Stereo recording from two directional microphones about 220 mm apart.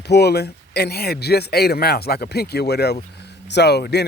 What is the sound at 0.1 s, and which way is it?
Speech, 50° left (ahead or behind).